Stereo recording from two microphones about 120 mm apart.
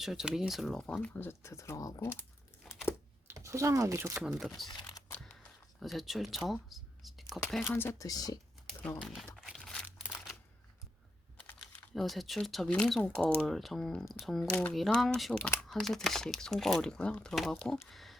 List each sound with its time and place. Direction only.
0.0 s speech: 5° right (ahead or behind); by 2.2 s 20° left (ahead or behind)
2.6 s crumpling: 5° left (ahead or behind)
3.2 s speech: 25° right (ahead or behind)
4.2 s speech: 5° right (ahead or behind)
4.7 s a sound: 35° left (ahead or behind)
5.1 s a sound: 5° left (ahead or behind)
7.4 s speech: centre (ahead or behind)
7.7 s speech: 20° left (ahead or behind)
8.0 s speech: 30° left (ahead or behind)
9.0 s crumpling: centre (ahead or behind)
9.8 s crumpling: 10° right (ahead or behind)
11.3 s typing: 10° left (ahead or behind)
11.9 s speech: centre (ahead or behind)
17.8 s a sound: centre (ahead or behind)